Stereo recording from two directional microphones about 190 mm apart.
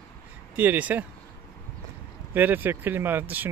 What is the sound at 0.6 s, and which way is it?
Speech, 10° right (ahead or behind).